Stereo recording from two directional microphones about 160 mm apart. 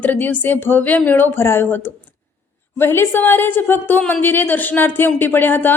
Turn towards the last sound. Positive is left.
turn(degrees=10)  # may be behind; listen again after turning